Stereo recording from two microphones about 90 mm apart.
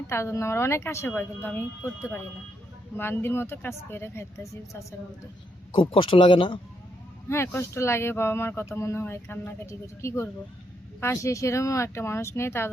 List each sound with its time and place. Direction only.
0.1 s speech: 30° left (ahead or behind)
3.0 s speech: 25° left (ahead or behind)
5.7 s speech: 75° left (ahead or behind)
7.3 s speech: 30° left (ahead or behind)